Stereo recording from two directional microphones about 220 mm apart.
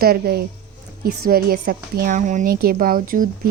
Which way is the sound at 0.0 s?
45° right (ahead or behind).